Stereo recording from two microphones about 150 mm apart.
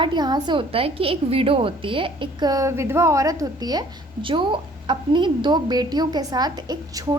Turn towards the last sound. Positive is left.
turn(degrees=-25)  # may be behind; listen again after turning